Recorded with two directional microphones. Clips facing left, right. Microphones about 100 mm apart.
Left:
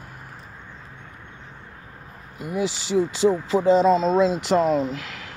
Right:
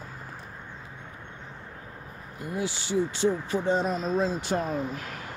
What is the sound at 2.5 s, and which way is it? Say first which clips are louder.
Speech: left 6 dB; 90° left.